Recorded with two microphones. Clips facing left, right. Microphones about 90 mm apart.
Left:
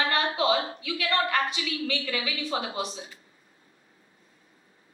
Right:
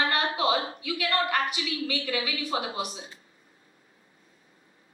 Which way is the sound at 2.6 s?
30° left (ahead or behind).